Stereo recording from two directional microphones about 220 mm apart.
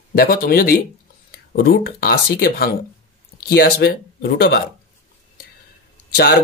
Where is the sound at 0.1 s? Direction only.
45° left (ahead or behind).